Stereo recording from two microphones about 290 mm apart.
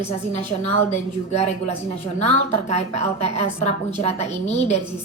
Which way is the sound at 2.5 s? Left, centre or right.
Left.